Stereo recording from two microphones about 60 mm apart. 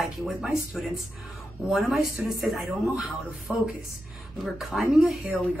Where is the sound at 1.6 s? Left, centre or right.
Centre.